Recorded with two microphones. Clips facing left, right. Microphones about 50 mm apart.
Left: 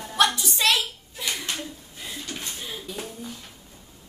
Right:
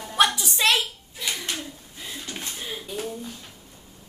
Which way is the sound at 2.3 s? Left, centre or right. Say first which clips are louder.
Right 3 dB; centre.